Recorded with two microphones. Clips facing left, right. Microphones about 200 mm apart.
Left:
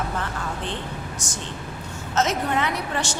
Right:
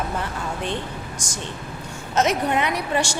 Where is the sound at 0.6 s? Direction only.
10° right (ahead or behind).